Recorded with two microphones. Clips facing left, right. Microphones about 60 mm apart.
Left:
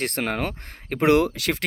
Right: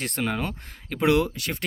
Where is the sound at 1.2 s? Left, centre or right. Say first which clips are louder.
Left 4 dB; left.